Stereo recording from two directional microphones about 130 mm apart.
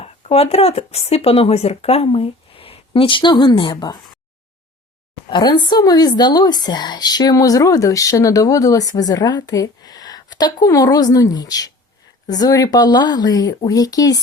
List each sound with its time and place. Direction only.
0.0 s speech: 50° left (ahead or behind)
5.3 s a woman's voice: 35° left (ahead or behind)